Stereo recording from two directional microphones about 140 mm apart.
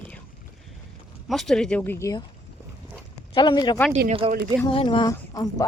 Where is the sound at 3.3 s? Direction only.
35° left (ahead or behind).